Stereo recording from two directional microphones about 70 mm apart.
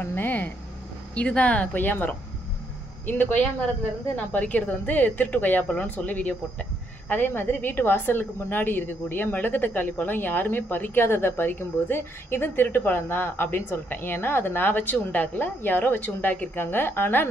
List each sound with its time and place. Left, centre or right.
0.0 s a woman's voice: left